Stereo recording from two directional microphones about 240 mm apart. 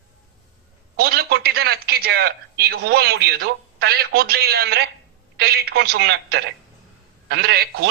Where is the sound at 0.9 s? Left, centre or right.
Right.